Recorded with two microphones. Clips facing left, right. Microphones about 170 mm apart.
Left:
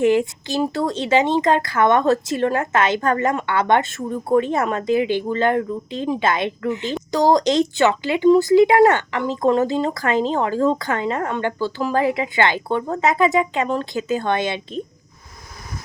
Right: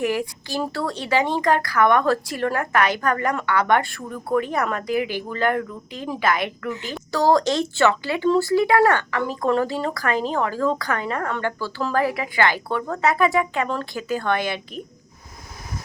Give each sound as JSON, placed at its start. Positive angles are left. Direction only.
{"t": 0.0, "sound": "speech", "side_deg": 25}